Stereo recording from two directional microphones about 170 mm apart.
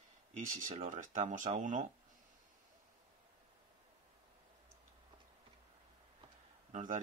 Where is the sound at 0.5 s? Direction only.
50° right (ahead or behind).